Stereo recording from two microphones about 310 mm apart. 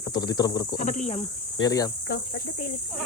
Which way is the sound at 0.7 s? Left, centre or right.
Left.